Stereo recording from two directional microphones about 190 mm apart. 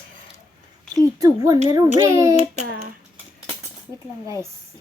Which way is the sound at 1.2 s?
15° right (ahead or behind).